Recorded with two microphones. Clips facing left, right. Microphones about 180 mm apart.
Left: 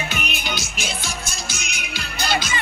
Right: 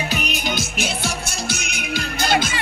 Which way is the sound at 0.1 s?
40° right (ahead or behind).